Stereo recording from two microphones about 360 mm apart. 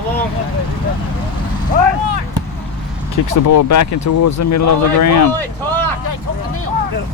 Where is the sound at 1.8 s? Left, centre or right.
Right.